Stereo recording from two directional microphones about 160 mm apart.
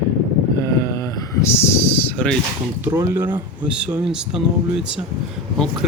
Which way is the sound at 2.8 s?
15° right (ahead or behind).